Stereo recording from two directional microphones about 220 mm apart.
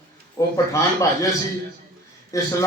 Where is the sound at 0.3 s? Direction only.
15° left (ahead or behind).